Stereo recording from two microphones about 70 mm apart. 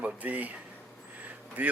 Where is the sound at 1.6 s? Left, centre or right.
Right.